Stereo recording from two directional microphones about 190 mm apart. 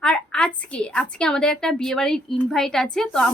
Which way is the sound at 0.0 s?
5° left (ahead or behind).